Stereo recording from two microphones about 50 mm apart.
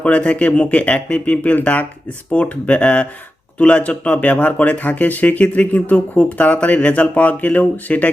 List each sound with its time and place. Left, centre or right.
0.0 s speech: left